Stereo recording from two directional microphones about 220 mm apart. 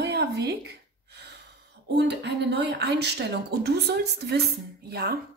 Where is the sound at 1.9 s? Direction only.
50° right (ahead or behind).